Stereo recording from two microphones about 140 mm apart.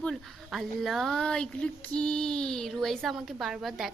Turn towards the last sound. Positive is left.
turn(degrees=0)  # may be behind; listen again after turning